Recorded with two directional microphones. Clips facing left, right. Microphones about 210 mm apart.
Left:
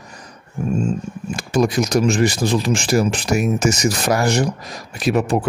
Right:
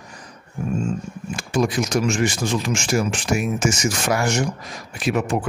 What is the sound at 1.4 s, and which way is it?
Speech, 40° left (ahead or behind).